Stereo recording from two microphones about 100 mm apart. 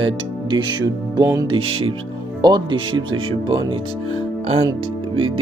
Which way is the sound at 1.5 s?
70° right (ahead or behind).